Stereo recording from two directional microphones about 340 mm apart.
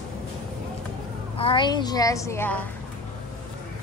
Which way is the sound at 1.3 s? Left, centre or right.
Centre.